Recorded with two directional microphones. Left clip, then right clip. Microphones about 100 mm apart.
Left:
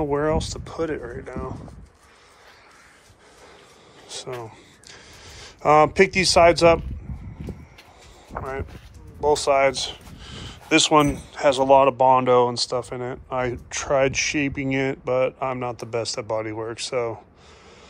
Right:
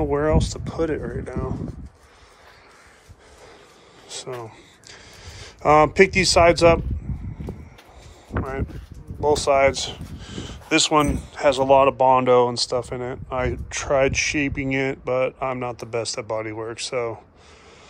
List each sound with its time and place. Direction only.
0.0 s speech: 25° right (ahead or behind)
4.1 s speech: 25° right (ahead or behind)
9.2 s speech: 25° right (ahead or behind)
10.2 s a sound: 40° right (ahead or behind)
10.7 s speech: 10° right (ahead or behind)
11.1 s speech: 20° right (ahead or behind)